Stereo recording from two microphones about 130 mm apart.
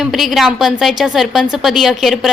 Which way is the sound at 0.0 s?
Centre (ahead or behind).